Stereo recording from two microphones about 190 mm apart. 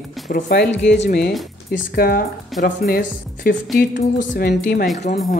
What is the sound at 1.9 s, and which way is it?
Speech, 50° left (ahead or behind).